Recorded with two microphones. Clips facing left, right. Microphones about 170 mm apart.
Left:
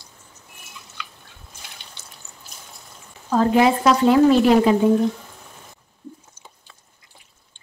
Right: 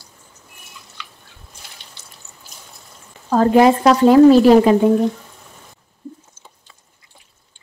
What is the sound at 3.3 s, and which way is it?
Speech, 50° right (ahead or behind).